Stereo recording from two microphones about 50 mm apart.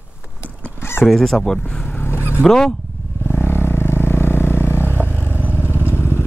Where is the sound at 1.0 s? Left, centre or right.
Centre.